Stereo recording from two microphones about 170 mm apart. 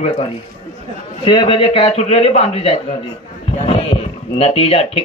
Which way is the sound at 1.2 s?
30° left (ahead or behind).